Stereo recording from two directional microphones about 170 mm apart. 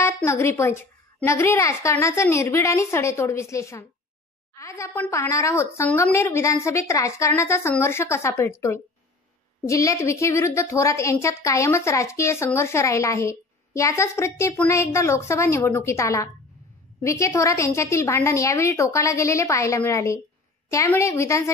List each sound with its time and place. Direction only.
0.0 s a woman's voice: 15° left (ahead or behind)